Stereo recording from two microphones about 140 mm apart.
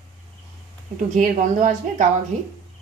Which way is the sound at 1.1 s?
65° right (ahead or behind).